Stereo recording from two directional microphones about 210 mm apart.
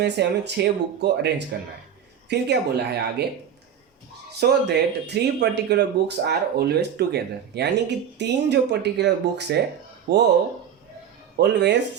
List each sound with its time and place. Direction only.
0.0 s speech: 55° right (ahead or behind)
4.4 s speech: 50° right (ahead or behind)
11.3 s speech: 55° right (ahead or behind)